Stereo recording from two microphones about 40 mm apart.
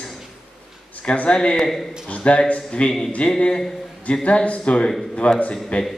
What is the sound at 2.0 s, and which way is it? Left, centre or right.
Speech, left.